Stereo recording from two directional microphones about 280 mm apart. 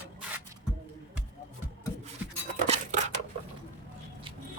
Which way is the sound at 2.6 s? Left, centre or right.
Right.